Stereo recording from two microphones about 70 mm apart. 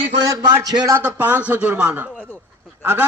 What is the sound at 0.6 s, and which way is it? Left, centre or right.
Speech, right.